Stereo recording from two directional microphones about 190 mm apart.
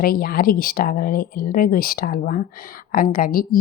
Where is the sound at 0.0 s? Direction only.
50° left (ahead or behind).